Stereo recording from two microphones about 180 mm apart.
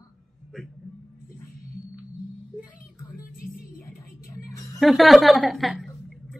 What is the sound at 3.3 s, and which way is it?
Music, 55° left (ahead or behind).